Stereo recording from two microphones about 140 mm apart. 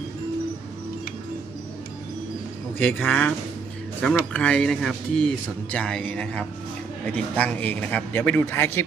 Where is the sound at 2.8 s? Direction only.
10° left (ahead or behind).